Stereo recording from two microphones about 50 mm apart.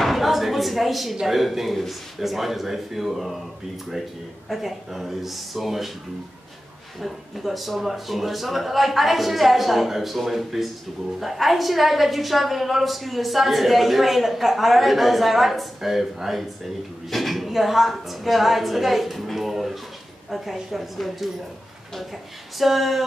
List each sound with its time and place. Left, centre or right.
0.0 s a sound: centre
1.2 s a woman's voice: centre
4.5 s a woman's voice: centre
7.0 s a woman's voice: centre